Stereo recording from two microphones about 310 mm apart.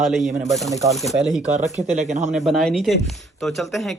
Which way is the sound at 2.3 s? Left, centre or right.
Centre.